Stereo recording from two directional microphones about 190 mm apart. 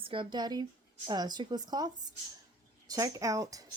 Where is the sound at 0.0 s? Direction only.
25° right (ahead or behind).